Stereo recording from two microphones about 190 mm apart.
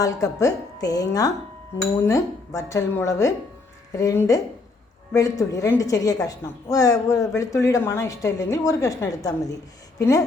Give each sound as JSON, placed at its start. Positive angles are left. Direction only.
{"t": 0.0, "sound": "a woman's voice", "side_deg": 15}